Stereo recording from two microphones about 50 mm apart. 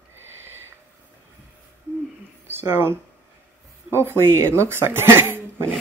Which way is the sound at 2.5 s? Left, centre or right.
Right.